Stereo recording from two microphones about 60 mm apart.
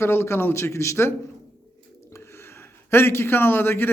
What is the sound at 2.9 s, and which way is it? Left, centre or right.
A man's voice, left.